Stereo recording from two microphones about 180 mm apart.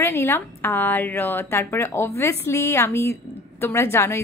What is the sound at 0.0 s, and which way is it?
A woman's voice, 15° left (ahead or behind).